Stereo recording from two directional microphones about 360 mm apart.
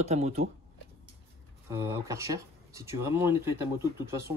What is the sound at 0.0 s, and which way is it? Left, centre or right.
Speech, centre.